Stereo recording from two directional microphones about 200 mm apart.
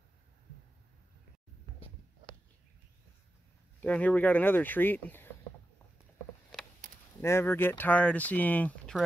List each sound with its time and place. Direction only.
3.8 s speech: 5° left (ahead or behind)
6.8 s a sound: 35° right (ahead or behind)
7.2 s speech: 10° left (ahead or behind)